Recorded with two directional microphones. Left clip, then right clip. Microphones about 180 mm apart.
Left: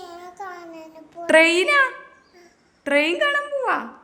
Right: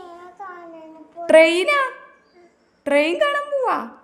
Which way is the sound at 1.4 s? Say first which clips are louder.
Right 1 dB; 10° right (ahead or behind).